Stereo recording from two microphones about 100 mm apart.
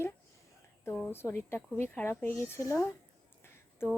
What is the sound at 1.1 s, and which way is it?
A woman's voice, 25° left (ahead or behind).